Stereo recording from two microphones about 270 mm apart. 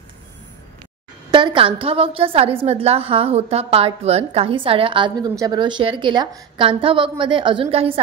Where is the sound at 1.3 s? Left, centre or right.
Centre.